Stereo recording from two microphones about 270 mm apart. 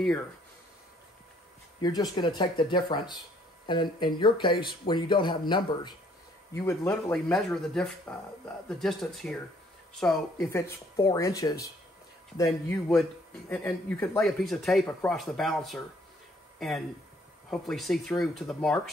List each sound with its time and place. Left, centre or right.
1.8 s speech: centre